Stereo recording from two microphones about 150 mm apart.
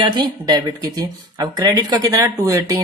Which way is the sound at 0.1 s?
30° right (ahead or behind).